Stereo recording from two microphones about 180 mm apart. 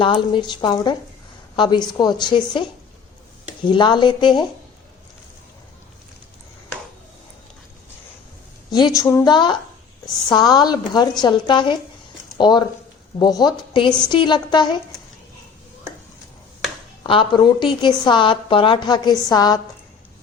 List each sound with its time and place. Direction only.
0.0 s a woman's voice: 25° left (ahead or behind)
8.7 s a woman's voice: 20° left (ahead or behind)
17.0 s a woman's voice: 25° left (ahead or behind)